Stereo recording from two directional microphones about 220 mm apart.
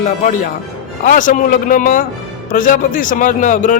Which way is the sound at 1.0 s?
35° left (ahead or behind).